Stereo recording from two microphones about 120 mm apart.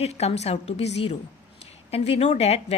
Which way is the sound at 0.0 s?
60° left (ahead or behind).